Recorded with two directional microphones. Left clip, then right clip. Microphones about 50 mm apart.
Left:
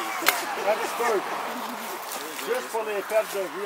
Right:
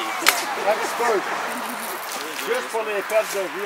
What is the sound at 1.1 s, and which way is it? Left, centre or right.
Speech, right.